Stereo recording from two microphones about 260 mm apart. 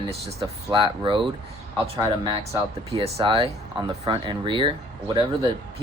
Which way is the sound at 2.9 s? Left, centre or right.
Right.